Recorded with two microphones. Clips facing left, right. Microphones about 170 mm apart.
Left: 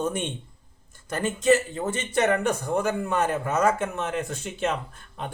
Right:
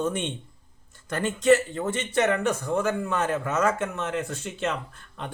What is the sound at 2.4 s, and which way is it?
Speech, 15° left (ahead or behind).